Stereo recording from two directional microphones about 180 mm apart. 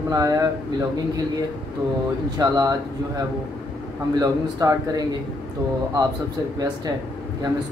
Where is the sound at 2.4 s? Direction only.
20° right (ahead or behind).